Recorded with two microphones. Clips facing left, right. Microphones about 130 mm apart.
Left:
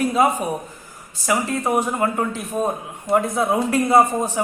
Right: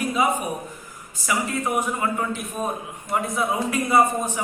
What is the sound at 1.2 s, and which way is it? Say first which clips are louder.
A man's voice: left 4 dB; 25° left (ahead or behind).